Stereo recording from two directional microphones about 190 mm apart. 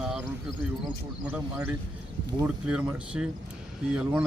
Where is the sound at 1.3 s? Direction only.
10° right (ahead or behind).